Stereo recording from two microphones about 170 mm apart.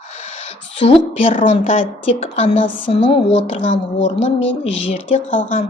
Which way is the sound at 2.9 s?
30° left (ahead or behind).